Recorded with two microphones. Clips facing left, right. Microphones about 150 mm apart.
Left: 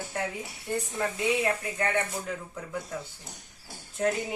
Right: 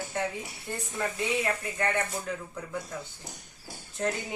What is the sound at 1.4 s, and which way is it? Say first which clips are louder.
A woman's voice: left 1 dB; centre (ahead or behind).